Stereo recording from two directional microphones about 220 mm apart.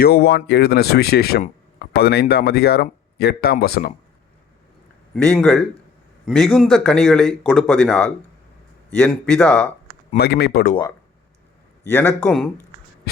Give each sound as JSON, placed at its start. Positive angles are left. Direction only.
{"t": 0.0, "sound": "speech", "side_deg": 45}
{"t": 5.1, "sound": "speech", "side_deg": 5}
{"t": 10.2, "sound": "speech", "side_deg": 45}
{"t": 11.9, "sound": "a man's voice", "side_deg": 10}